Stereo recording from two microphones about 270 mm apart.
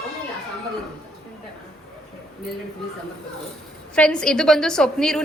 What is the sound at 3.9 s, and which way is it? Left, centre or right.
A woman's voice, centre.